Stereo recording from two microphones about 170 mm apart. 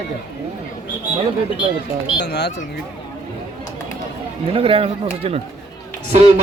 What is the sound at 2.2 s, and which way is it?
Speech, 80° left.